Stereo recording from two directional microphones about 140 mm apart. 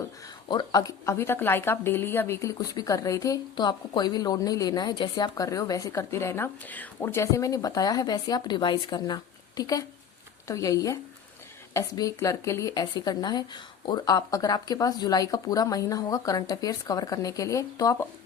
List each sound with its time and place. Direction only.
0.4 s speech: 30° left (ahead or behind)